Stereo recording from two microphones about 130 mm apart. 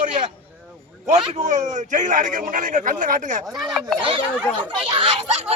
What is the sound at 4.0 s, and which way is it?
Speech, 40° right (ahead or behind).